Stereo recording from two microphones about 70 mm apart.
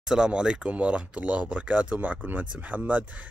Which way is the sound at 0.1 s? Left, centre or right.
Centre.